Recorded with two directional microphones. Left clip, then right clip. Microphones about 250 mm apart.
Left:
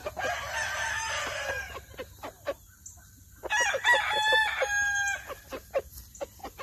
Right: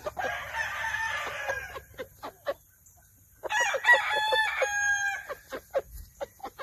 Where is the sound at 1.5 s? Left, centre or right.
Centre.